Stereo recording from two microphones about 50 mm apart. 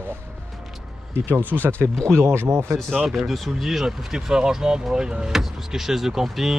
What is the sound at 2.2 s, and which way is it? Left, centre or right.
Speech, right.